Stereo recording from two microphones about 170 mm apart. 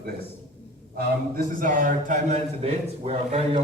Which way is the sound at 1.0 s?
55° right (ahead or behind).